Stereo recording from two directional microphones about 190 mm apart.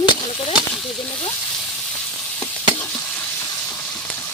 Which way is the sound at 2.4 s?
10° left (ahead or behind).